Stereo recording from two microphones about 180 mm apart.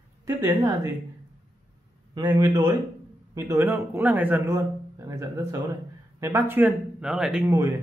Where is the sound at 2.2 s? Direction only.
15° right (ahead or behind).